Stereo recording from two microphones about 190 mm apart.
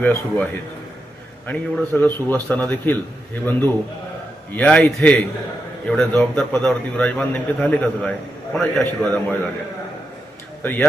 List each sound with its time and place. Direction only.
0.0 s a man's voice: 10° left (ahead or behind)
1.5 s a man's voice: 10° left (ahead or behind)
4.5 s a man's voice: 5° left (ahead or behind)
10.6 s speech: 10° left (ahead or behind)